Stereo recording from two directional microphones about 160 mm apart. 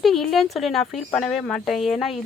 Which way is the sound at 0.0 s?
Centre (ahead or behind).